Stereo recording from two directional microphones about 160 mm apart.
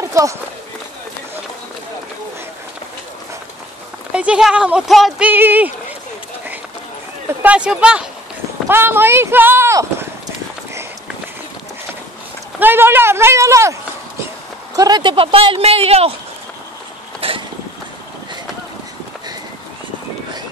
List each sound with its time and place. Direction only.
0.1 s speech: 20° right (ahead or behind)
4.1 s speech: 5° right (ahead or behind)
5.3 s speech: 10° right (ahead or behind)
7.4 s speech: 5° right (ahead or behind)
12.5 s speech: 15° right (ahead or behind)
14.8 s speech: 25° right (ahead or behind)
17.2 s vehicle: 35° right (ahead or behind)